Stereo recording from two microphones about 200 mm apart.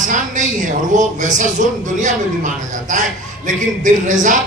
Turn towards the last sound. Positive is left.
turn(degrees=-40)  # may be behind; listen again after turning